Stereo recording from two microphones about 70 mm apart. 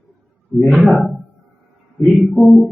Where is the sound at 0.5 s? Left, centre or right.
Left.